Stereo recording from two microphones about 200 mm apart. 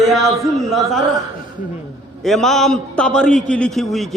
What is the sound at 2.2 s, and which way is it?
A man's voice, centre (ahead or behind).